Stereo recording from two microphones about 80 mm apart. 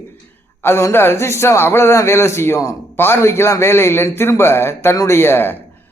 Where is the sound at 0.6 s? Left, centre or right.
Left.